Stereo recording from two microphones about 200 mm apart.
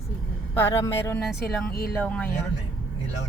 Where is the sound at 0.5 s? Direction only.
15° left (ahead or behind).